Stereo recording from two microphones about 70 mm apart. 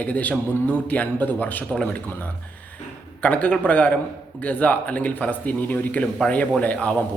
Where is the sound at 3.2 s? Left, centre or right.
Centre.